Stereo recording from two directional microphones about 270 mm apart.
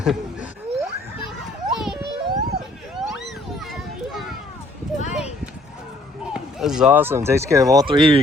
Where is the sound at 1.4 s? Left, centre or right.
Centre.